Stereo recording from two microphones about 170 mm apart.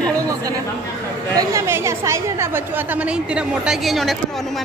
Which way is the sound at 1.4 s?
15° right (ahead or behind).